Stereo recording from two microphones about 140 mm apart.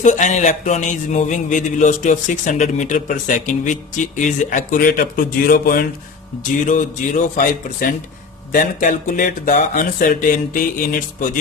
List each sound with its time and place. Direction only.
0.0 s speech: 60° left (ahead or behind); by 5.8 s 90° left
6.4 s speech: 65° left (ahead or behind); by 7.9 s 80° left
8.5 s speech: 70° left (ahead or behind)